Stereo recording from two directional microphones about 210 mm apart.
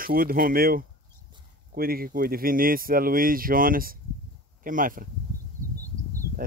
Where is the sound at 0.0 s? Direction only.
45° right (ahead or behind).